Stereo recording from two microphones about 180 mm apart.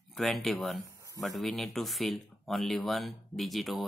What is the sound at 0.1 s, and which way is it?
Speech, centre (ahead or behind).